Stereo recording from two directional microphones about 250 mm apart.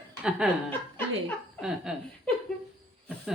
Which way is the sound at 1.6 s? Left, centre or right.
Centre.